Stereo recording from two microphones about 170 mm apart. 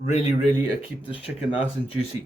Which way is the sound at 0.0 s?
40° left (ahead or behind).